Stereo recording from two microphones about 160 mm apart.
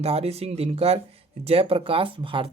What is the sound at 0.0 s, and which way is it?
Speech, 40° right (ahead or behind).